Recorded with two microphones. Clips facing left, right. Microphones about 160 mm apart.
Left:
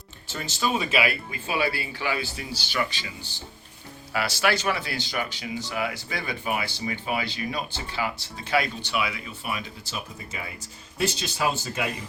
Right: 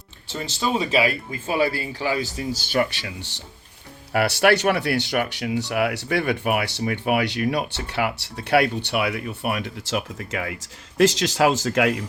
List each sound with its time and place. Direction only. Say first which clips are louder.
0.3 s speech: right 2 dB; 30° right (ahead or behind); by 2.8 s 50° right (ahead or behind)
2.9 s speech: right 4 dB; 75° right (ahead or behind)
4.1 s speech: right 7 dB; 60° right (ahead or behind); by 12.0 s 90° right